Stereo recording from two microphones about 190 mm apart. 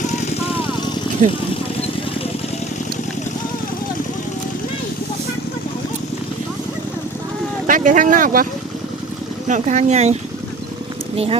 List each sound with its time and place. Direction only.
0.1 s vehicle: 35° left (ahead or behind)
1.2 s speech: 40° right (ahead or behind)
7.7 s speech: 45° right (ahead or behind)
9.5 s speech: 40° right (ahead or behind)